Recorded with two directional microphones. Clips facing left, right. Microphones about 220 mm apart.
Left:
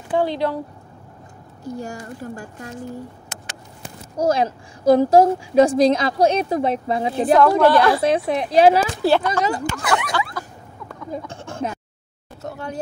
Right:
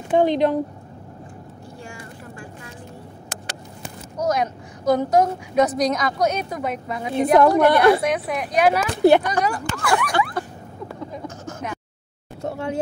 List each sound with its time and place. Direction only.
0.1 s a woman's voice: 20° right (ahead or behind)
1.6 s speech: 40° left (ahead or behind)
4.2 s a woman's voice: 30° left (ahead or behind)
7.3 s a woman's voice: 20° right (ahead or behind)
8.0 s a woman's voice: 30° left (ahead or behind)
9.0 s speech: 15° right (ahead or behind)
9.4 s a woman's voice: 20° left (ahead or behind)
11.2 s a sound: 30° left (ahead or behind)
12.4 s speech: 25° right (ahead or behind)